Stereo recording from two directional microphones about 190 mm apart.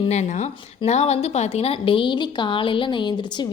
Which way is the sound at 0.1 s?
35° left (ahead or behind).